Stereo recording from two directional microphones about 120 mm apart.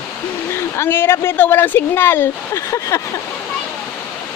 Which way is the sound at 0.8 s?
20° left (ahead or behind).